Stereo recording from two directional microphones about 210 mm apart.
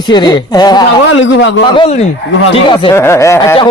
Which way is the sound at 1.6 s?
25° left (ahead or behind).